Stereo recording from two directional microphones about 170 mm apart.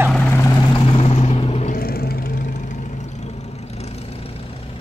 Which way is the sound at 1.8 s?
60° left (ahead or behind).